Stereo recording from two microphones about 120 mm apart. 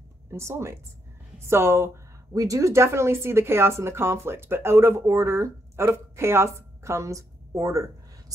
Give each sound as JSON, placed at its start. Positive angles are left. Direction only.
{"t": 0.3, "sound": "speech", "side_deg": -25}